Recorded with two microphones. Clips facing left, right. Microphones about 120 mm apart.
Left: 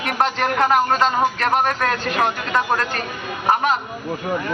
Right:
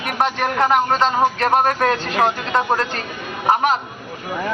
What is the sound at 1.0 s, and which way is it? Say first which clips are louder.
Speech: right 2 dB; 30° right (ahead or behind).